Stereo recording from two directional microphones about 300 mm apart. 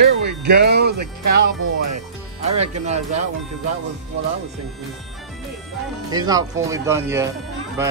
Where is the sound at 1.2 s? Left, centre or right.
Right.